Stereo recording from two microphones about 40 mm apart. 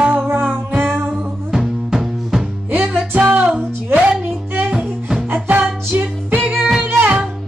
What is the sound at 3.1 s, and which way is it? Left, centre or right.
Music, right.